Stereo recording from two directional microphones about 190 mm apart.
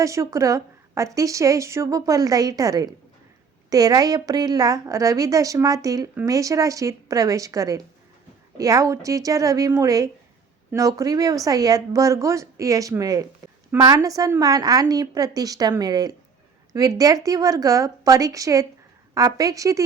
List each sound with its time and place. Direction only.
0.0 s a woman's voice: 15° right (ahead or behind)